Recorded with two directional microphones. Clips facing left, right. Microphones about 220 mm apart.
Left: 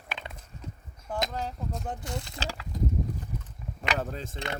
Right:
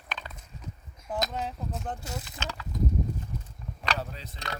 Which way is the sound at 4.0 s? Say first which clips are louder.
Left 5 dB; 50° left (ahead or behind).